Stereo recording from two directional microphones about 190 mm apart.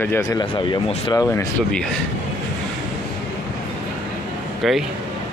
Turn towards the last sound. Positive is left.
turn(degrees=0)  # may be behind; listen again after turning